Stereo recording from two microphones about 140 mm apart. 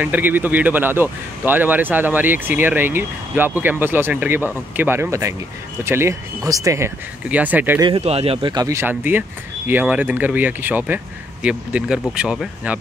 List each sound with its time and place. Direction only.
0.0 s speech: 15° right (ahead or behind)
7.2 s speech: 10° right (ahead or behind)
8.0 s speech: 45° right (ahead or behind)
8.6 s speech: 15° right (ahead or behind)